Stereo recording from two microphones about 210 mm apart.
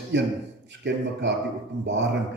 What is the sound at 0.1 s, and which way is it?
A man's voice, 55° right (ahead or behind).